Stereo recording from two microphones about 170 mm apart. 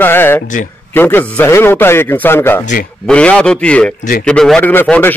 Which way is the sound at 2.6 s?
50° left (ahead or behind).